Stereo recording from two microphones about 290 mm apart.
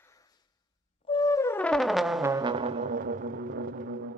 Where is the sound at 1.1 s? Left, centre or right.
Centre.